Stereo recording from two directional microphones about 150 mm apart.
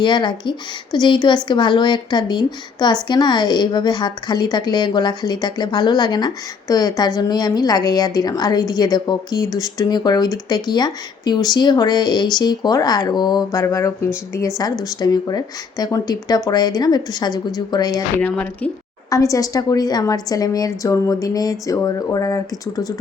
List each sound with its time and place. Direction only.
0.0 s a woman's voice: 30° left (ahead or behind)
18.2 s speech: 10° left (ahead or behind)
19.1 s a woman's voice: 20° left (ahead or behind)